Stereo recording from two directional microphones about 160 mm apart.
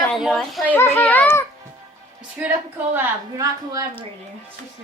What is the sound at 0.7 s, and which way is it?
Speech, 15° left (ahead or behind).